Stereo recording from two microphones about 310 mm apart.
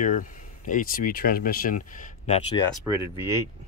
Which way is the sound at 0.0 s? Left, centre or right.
Left.